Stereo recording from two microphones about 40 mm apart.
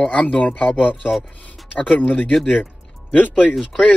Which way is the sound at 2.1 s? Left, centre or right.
Left.